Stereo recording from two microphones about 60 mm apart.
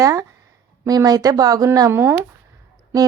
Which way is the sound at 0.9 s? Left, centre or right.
Right.